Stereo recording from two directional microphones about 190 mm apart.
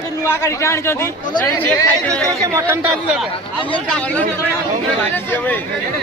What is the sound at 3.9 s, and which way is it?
Speech, 5° left (ahead or behind).